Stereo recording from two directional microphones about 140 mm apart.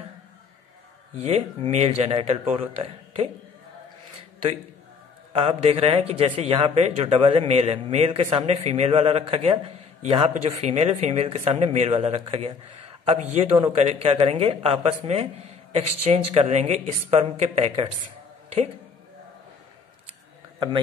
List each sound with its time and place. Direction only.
1.2 s a man's voice: 50° right (ahead or behind)
5.3 s a man's voice: 40° right (ahead or behind)
20.5 s a man's voice: 30° right (ahead or behind)